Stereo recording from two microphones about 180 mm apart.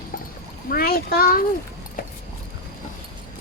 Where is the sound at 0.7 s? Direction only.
55° left (ahead or behind).